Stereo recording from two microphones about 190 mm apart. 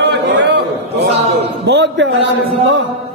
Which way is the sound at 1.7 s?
70° right (ahead or behind).